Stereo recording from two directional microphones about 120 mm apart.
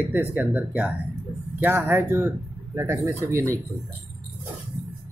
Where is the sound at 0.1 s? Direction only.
15° right (ahead or behind).